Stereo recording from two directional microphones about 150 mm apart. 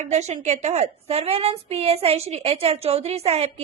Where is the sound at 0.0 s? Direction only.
50° right (ahead or behind).